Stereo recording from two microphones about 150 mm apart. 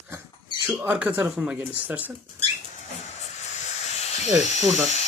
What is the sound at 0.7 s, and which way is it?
Speech, 10° right (ahead or behind).